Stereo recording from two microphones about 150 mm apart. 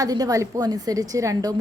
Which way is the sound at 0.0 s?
25° right (ahead or behind).